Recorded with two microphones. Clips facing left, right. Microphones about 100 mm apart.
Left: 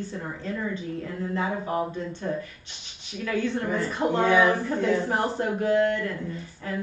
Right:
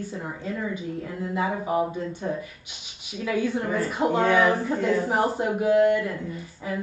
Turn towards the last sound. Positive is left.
turn(degrees=-10)  # may be behind; listen again after turning